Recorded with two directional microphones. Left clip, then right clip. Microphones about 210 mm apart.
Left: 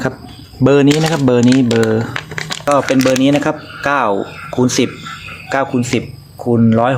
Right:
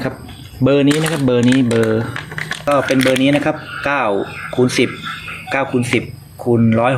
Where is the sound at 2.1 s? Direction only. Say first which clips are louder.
Left 2 dB; 30° left (ahead or behind).